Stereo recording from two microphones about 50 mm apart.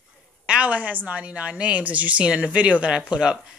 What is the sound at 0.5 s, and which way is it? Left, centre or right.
A woman's voice, right.